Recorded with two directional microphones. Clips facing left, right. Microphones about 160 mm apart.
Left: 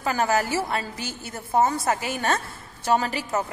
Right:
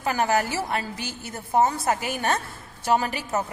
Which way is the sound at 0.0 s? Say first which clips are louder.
Even; 15° right (ahead or behind).